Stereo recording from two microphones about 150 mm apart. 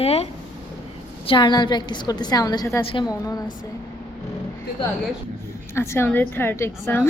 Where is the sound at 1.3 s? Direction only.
30° left (ahead or behind).